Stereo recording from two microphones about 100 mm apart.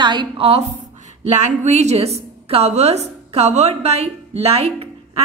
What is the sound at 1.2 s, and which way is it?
A woman's voice, 90° right.